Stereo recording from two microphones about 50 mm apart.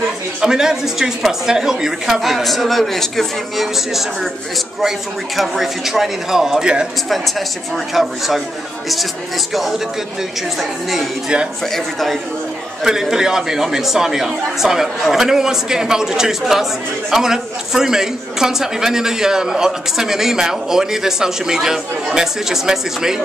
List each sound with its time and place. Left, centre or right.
0.4 s speech: centre
6.6 s a man's voice: centre
7.1 s speech: centre
9.5 s speech: centre
12.8 s a man's voice: centre